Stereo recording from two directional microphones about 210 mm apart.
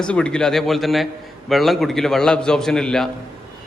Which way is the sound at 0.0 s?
5° left (ahead or behind).